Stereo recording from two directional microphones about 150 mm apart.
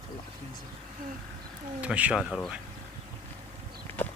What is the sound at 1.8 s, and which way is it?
Speech, 10° right (ahead or behind).